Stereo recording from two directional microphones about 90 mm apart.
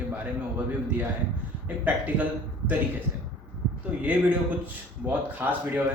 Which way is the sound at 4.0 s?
15° right (ahead or behind).